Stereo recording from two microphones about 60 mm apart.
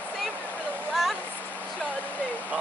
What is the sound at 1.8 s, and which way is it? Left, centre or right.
Hair dryer, left.